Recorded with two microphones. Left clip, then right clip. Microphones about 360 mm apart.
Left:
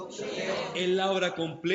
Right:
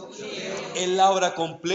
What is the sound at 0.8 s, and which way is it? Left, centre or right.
Speech, centre.